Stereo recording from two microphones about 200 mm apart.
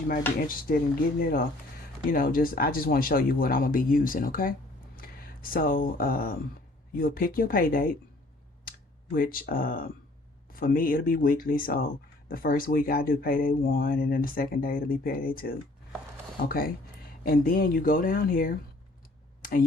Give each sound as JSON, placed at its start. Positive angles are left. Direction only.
{"t": 0.4, "sound": "speech", "side_deg": 45}
{"t": 9.1, "sound": "speech", "side_deg": 45}
{"t": 19.4, "sound": "a sound", "side_deg": 45}